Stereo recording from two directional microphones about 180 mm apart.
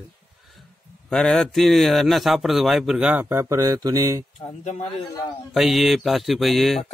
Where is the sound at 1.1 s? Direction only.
Centre (ahead or behind); by 4.3 s 20° right (ahead or behind).